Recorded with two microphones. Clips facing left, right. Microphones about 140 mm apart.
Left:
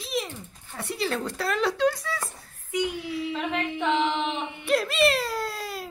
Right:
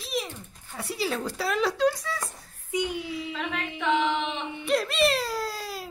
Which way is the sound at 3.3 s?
30° left (ahead or behind).